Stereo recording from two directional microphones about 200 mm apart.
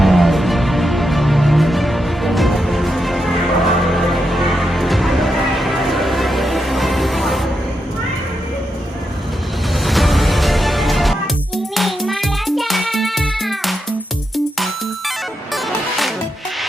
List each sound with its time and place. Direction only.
0.0 s music: centre (ahead or behind)
9.8 s music: centre (ahead or behind)